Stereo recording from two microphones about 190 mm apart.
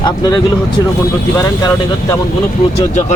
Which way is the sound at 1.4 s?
20° left (ahead or behind).